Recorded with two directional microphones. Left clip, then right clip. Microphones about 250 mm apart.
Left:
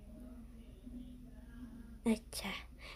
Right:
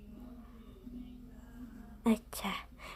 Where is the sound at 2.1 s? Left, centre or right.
Centre.